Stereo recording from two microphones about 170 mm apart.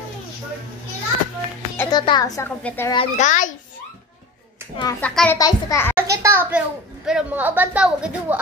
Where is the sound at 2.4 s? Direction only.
10° left (ahead or behind).